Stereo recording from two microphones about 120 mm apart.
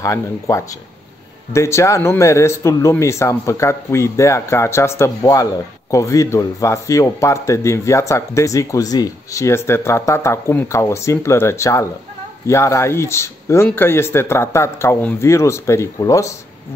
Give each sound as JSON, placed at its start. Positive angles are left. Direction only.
{"t": 0.0, "sound": "speech", "side_deg": 25}